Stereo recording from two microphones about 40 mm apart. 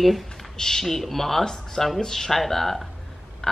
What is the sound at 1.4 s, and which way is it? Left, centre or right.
Speech, centre.